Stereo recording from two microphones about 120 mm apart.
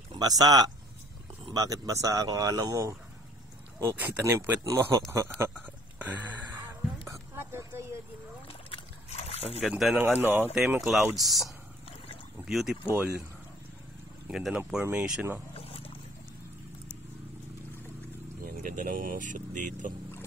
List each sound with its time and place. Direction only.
0.2 s speech: 30° right (ahead or behind)
3.8 s speech: 15° right (ahead or behind)
5.5 s a sound: 15° right (ahead or behind)
8.6 s slosh: 55° left (ahead or behind)
9.6 s speech: 5° right (ahead or behind)
9.9 s speech: 15° right (ahead or behind)
10.8 s speech: centre (ahead or behind)
14.2 s speech: 5° right (ahead or behind)
15.5 s wild animals: 55° left (ahead or behind)
18.6 s speech: 90° right